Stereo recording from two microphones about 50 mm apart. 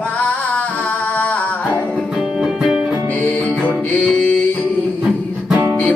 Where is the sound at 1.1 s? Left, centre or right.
Left.